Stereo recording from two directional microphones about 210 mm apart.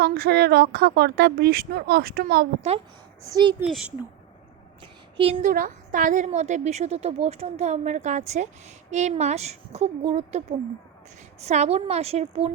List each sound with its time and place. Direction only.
0.0 s a woman's voice: 50° right (ahead or behind)
3.2 s speech: 20° right (ahead or behind)
3.6 s speech: 5° right (ahead or behind)
4.8 s a sound: 25° right (ahead or behind)
5.5 s a woman's voice: 40° right (ahead or behind)